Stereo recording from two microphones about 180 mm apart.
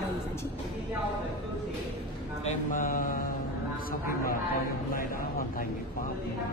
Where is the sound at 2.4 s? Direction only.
45° left (ahead or behind).